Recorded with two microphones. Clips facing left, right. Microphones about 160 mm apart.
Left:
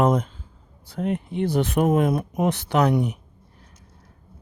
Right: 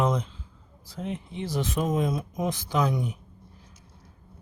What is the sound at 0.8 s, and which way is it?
Speech, 60° left (ahead or behind).